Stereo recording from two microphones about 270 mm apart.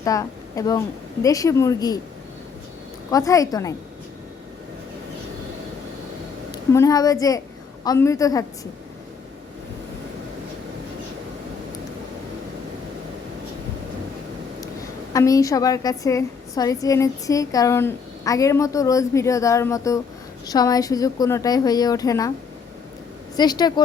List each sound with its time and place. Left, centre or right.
0.0 s a woman's voice: centre
3.1 s a woman's voice: centre
6.5 s a woman's voice: centre
15.1 s a woman's voice: centre
23.4 s a woman's voice: centre